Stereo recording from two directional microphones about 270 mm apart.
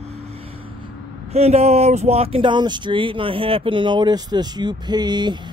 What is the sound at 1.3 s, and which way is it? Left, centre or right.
Speech, right.